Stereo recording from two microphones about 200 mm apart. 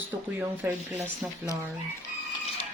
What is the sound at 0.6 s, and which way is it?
Speech, 10° right (ahead or behind).